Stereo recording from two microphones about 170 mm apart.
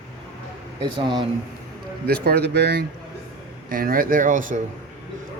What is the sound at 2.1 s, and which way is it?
Speech, 70° right (ahead or behind).